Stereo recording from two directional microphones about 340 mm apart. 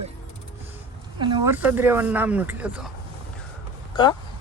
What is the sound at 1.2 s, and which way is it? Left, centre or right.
Speech, centre.